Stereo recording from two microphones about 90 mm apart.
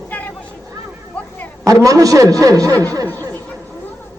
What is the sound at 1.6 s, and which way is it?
A man's voice, 40° right (ahead or behind).